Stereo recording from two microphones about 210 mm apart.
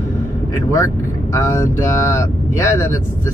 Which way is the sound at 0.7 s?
15° left (ahead or behind).